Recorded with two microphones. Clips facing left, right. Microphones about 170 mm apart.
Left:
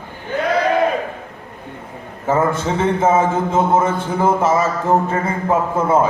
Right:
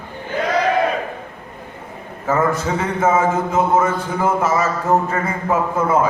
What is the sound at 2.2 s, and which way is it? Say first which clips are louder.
A man's voice: left 1 dB; 25° left (ahead or behind).